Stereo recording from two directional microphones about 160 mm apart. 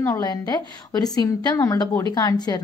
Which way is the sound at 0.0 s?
20° left (ahead or behind).